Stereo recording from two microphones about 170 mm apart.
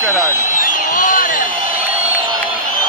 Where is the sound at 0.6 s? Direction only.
50° left (ahead or behind).